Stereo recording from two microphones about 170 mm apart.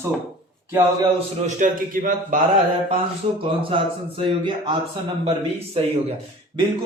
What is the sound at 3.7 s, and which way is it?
Speech, 30° right (ahead or behind).